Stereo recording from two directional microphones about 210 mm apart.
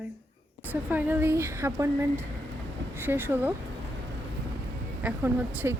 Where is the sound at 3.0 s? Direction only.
10° right (ahead or behind).